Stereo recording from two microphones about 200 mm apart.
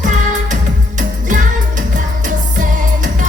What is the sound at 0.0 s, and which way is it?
Music, 40° right (ahead or behind).